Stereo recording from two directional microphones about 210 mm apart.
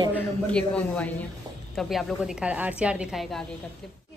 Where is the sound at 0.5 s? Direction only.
5° left (ahead or behind).